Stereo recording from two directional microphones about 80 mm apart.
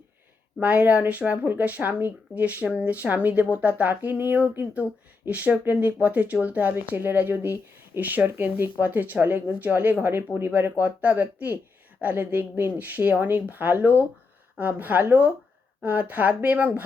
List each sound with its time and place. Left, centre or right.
0.6 s speech: centre